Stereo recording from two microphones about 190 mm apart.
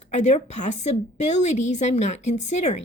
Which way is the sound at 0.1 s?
35° left (ahead or behind).